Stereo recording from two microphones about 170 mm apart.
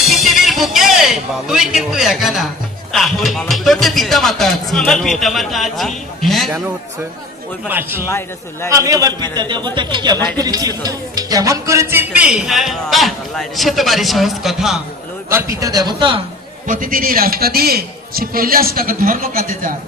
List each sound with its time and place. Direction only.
0.0 s a sound: centre (ahead or behind)
2.9 s speech: centre (ahead or behind)
7.6 s a man's voice: 10° right (ahead or behind)
15.2 s a man's voice: 15° right (ahead or behind)
16.6 s a man's voice: 50° right (ahead or behind)